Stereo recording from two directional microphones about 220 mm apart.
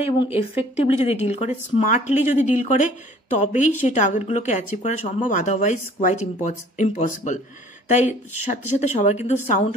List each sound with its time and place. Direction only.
0.0 s speech: 25° left (ahead or behind)